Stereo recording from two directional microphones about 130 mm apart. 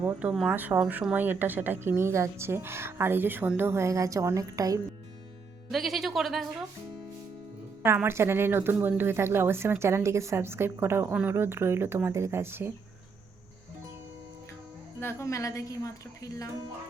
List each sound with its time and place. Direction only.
0.0 s a woman's voice: 10° right (ahead or behind); by 4.8 s 25° right (ahead or behind)
5.7 s speech: centre (ahead or behind)
7.9 s a woman's voice: 20° right (ahead or behind)
15.0 s a woman's voice: 25° left (ahead or behind)